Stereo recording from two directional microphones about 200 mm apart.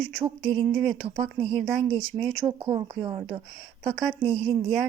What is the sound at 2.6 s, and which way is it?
Speech, 25° right (ahead or behind).